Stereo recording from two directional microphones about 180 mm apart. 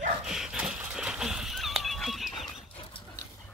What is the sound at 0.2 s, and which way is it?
Horse, 5° right (ahead or behind).